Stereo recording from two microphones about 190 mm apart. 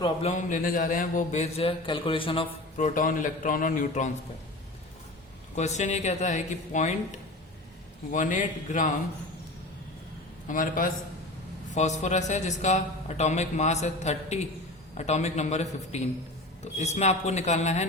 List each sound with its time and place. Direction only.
0.0 s a man's voice: 35° left (ahead or behind)
2.7 s a man's voice: 40° left (ahead or behind)
5.5 s a man's voice: 40° left (ahead or behind)
8.1 s a man's voice: 40° left (ahead or behind)
10.5 s a man's voice: 45° left (ahead or behind)